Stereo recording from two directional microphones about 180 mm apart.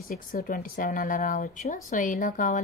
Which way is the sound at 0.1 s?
50° left (ahead or behind).